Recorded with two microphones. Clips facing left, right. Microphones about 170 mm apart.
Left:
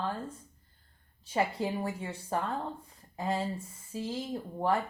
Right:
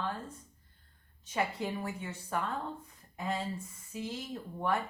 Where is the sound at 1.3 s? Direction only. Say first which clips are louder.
Left 4 dB; 30° left (ahead or behind).